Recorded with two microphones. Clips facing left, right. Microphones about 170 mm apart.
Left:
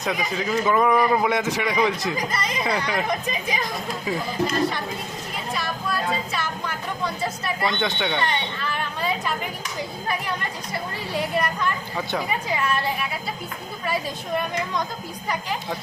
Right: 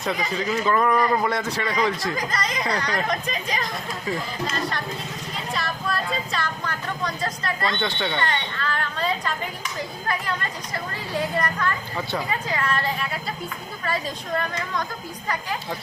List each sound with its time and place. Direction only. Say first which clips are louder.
0.1 s speech: even; 10° left (ahead or behind)
1.3 s speech: left 2 dB; 15° left (ahead or behind)
5.5 s speech: even; centre (ahead or behind)
7.7 s speech: left 1 dB; 20° left (ahead or behind)
11.1 s speech: even; 10° left (ahead or behind)